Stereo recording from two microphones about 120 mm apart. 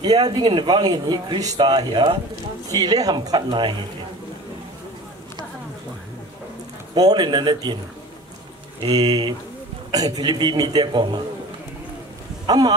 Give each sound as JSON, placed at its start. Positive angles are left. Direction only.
{"t": 0.0, "sound": "a man's voice", "side_deg": -35}
{"t": 7.0, "sound": "a man's voice", "side_deg": -35}
{"t": 8.8, "sound": "a man's voice", "side_deg": -35}
{"t": 12.4, "sound": "speech", "side_deg": -35}